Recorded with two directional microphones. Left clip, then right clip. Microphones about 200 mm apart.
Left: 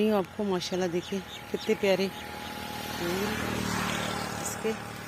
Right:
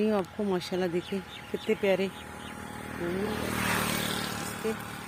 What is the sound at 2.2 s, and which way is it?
Vehicle, 40° left (ahead or behind).